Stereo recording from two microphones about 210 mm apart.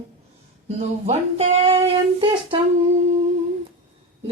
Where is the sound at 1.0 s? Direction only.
30° right (ahead or behind).